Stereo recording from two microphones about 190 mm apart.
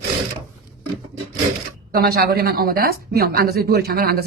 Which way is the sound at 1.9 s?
50° right (ahead or behind).